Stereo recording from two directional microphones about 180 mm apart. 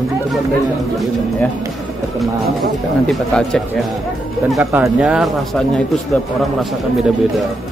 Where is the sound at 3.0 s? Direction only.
5° left (ahead or behind).